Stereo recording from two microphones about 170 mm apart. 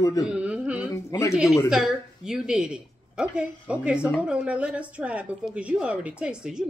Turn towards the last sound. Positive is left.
turn(degrees=-5)  # may be behind; listen again after turning